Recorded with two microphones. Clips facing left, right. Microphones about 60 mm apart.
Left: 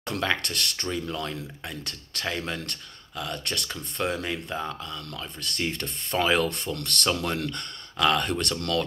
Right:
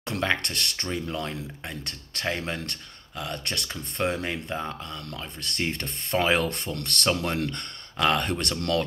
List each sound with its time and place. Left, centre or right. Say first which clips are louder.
0.1 s speech: right 1 dB; right